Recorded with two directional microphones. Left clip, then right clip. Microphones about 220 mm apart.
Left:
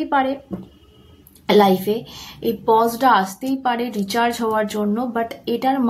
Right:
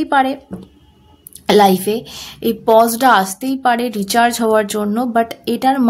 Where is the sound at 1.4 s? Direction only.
50° right (ahead or behind).